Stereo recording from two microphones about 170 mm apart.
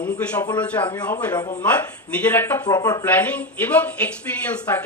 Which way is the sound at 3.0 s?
10° left (ahead or behind).